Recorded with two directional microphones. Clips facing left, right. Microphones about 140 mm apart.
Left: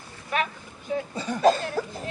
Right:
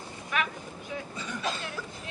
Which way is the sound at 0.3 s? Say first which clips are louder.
Left 4 dB; 35° left (ahead or behind).